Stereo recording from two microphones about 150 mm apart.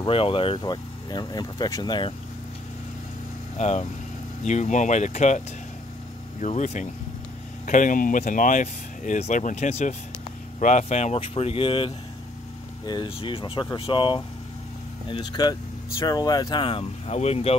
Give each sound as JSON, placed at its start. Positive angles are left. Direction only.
{"t": 0.0, "sound": "speech", "side_deg": 35}
{"t": 3.5, "sound": "speech", "side_deg": 50}
{"t": 6.4, "sound": "speech", "side_deg": 50}